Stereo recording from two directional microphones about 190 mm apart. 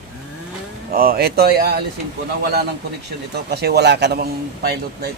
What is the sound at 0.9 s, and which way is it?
Speech, 50° right (ahead or behind).